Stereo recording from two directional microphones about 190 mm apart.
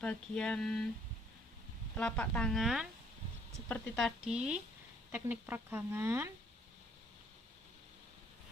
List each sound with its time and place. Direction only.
0.0 s speech: 5° left (ahead or behind)
2.0 s speech: 5° left (ahead or behind); by 6.3 s 15° right (ahead or behind)